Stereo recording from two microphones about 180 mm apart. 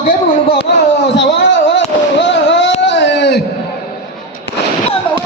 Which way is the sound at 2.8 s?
75° left (ahead or behind).